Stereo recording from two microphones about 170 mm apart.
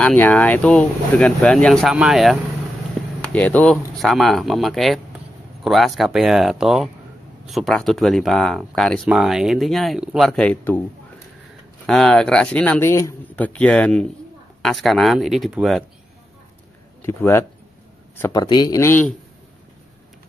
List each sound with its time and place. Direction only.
0.0 s speech: 10° left (ahead or behind)
3.2 s speech: 10° left (ahead or behind)
11.8 s speech: 5° left (ahead or behind)
17.0 s speech: 15° left (ahead or behind)
18.3 s speech: 25° left (ahead or behind)